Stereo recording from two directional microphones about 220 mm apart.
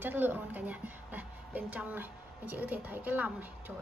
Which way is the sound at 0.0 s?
10° right (ahead or behind).